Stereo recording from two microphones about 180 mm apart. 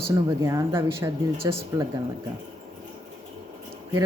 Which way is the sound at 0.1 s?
20° right (ahead or behind).